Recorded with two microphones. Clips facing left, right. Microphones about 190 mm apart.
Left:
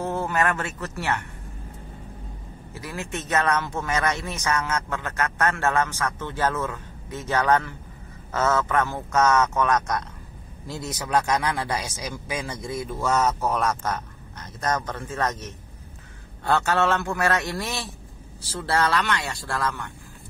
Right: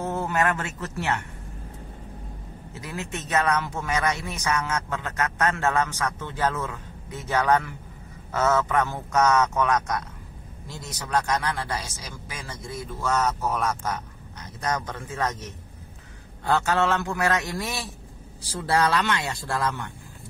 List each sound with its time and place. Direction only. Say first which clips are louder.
0.0 s a sound: left 1 dB; 5° right (ahead or behind)
0.3 s a man's voice: even; 15° right (ahead or behind)
2.7 s a man's voice: left 1 dB; 20° right (ahead or behind)
10.7 s a man's voice: left 3 dB; 10° left (ahead or behind); by 19.9 s 20° right (ahead or behind)